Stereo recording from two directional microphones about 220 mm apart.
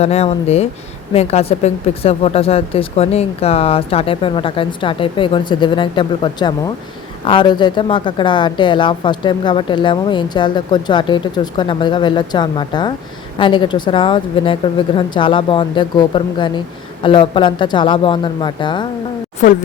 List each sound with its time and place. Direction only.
0.0 s a woman's voice: 30° left (ahead or behind)